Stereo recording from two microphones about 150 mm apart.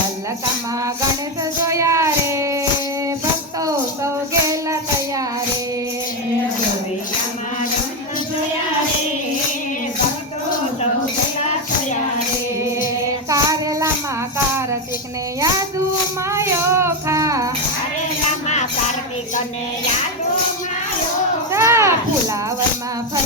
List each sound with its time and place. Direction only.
1.7 s music: 20° right (ahead or behind)
3.6 s music: 20° right (ahead or behind)
13.3 s child singing: 25° right (ahead or behind)
14.3 s music: 15° right (ahead or behind)
15.4 s child singing: 25° right (ahead or behind)
16.3 s music: 15° right (ahead or behind)
18.4 s music: 50° left (ahead or behind)
21.5 s children playing: 20° right (ahead or behind)